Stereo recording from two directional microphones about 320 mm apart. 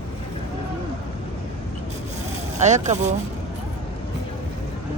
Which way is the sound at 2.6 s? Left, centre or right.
Right.